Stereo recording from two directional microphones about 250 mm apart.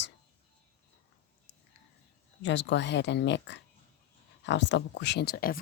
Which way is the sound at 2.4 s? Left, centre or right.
Left.